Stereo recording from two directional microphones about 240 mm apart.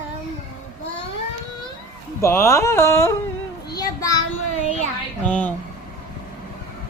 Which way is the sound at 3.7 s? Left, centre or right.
Centre.